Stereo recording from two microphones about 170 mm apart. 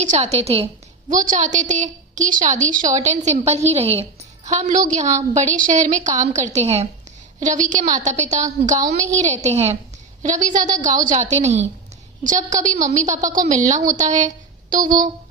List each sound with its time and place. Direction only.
0.0 s a woman's voice: 45° right (ahead or behind)
1.1 s a woman's voice: 50° right (ahead or behind)
14.8 s speech: 25° right (ahead or behind)